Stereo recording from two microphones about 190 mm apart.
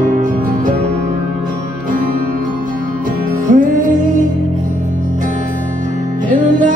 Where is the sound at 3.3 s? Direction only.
45° right (ahead or behind).